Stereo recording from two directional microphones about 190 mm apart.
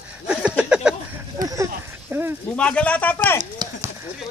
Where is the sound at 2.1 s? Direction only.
10° right (ahead or behind).